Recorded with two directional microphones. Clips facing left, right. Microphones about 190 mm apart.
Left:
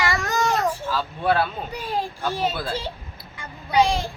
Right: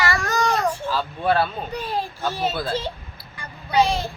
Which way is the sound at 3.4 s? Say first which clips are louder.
Even; 15° left (ahead or behind).